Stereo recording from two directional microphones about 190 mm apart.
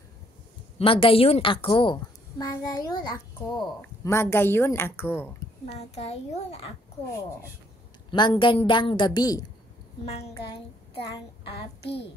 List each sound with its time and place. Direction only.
0.7 s a woman's voice: 30° left (ahead or behind); by 5.3 s 10° left (ahead or behind)
5.8 s a child's voice: 35° left (ahead or behind)
8.1 s a woman's voice: 25° left (ahead or behind)
11.8 s a child's voice: 60° left (ahead or behind)